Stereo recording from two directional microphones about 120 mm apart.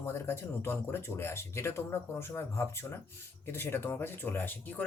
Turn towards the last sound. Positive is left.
turn(degrees=15)  # may be behind; listen again after turning